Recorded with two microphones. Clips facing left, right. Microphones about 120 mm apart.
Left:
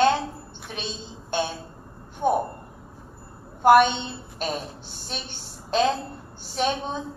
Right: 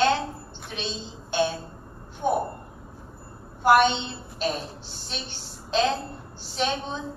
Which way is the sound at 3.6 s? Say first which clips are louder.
Left 3 dB; 50° left (ahead or behind).